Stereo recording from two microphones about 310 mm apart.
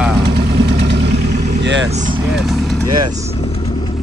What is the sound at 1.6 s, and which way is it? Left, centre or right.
Speech, right.